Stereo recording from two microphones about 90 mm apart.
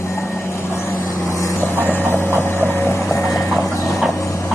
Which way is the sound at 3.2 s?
5° left (ahead or behind).